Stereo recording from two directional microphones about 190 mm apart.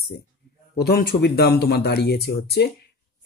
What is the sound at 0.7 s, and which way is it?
Speech, 55° left (ahead or behind).